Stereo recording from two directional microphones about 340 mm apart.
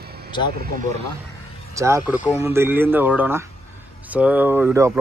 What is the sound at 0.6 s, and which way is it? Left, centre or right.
Speech, right.